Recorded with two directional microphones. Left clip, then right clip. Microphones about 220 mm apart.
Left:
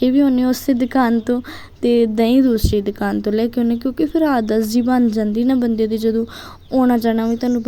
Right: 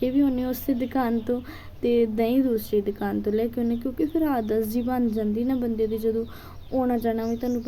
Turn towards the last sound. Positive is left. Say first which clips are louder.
# left 8 dB
turn(degrees=40)  # may be behind; listen again after turning